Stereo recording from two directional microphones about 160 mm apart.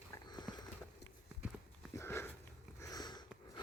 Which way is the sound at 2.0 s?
15° left (ahead or behind).